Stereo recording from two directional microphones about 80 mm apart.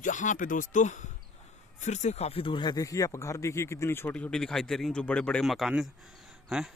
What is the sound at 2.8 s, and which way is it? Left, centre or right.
Speech, left.